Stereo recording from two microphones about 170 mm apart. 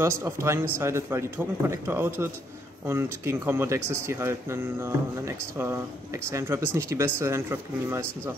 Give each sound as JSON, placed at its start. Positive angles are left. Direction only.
{"t": 0.0, "sound": "speech", "side_deg": -15}